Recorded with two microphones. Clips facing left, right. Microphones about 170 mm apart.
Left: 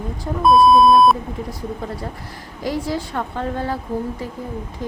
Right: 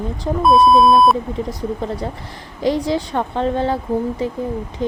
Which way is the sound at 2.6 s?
20° right (ahead or behind).